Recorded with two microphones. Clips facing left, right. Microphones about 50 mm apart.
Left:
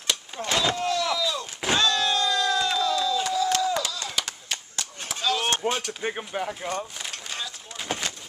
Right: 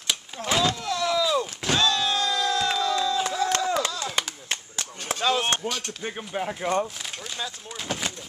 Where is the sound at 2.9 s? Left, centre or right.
Right.